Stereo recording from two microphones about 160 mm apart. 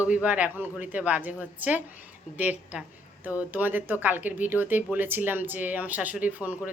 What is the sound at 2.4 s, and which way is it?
Speech, 10° right (ahead or behind).